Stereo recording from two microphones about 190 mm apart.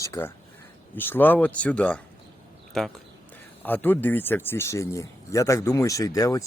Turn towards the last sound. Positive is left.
turn(degrees=20)  # may be behind; listen again after turning